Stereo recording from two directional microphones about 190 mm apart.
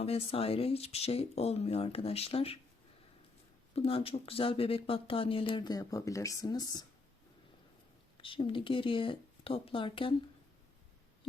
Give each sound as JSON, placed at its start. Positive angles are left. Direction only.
{"t": 0.0, "sound": "speech", "side_deg": 30}
{"t": 3.8, "sound": "speech", "side_deg": 30}
{"t": 8.2, "sound": "speech", "side_deg": 25}